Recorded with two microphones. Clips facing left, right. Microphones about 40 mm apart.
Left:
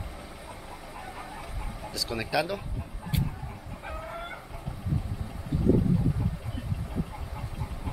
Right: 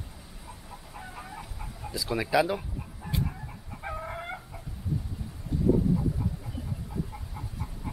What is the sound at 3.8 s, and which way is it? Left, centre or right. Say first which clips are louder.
Chicken: right 3 dB; centre.